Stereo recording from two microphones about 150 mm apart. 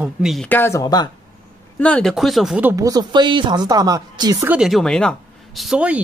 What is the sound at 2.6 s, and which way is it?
Speech, 20° right (ahead or behind).